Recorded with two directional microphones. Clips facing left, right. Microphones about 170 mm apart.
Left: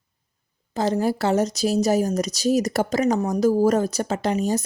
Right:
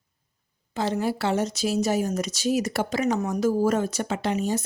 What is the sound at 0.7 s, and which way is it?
Speech, 40° left (ahead or behind).